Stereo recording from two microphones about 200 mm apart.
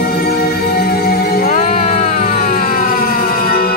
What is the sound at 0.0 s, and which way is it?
Music, 50° left (ahead or behind).